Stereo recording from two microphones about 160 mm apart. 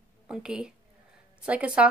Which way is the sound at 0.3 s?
5° right (ahead or behind).